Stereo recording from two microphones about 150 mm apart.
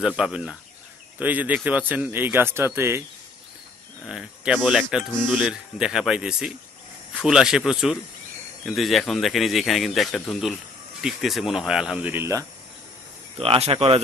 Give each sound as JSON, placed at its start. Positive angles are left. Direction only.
{"t": 0.2, "sound": "a man's voice", "side_deg": -5}
{"t": 4.0, "sound": "a man's voice", "side_deg": -5}
{"t": 13.4, "sound": "speech", "side_deg": -40}